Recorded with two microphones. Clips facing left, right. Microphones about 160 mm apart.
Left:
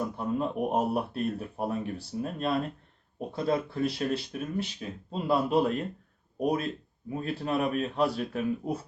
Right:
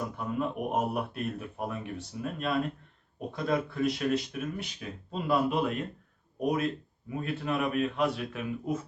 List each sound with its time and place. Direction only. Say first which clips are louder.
0.2 s speech: left 2 dB; 35° left (ahead or behind)
7.1 s speech: left 2 dB; 35° left (ahead or behind)